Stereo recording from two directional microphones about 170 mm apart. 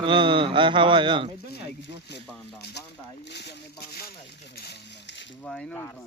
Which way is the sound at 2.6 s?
75° left (ahead or behind).